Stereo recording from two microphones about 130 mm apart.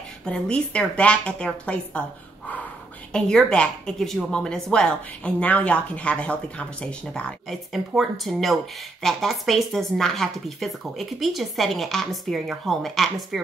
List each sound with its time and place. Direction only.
0.2 s a woman's voice: 10° left (ahead or behind)
3.1 s a woman's voice: 5° left (ahead or behind)